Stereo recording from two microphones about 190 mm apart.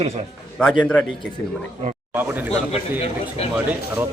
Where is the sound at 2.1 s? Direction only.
10° right (ahead or behind).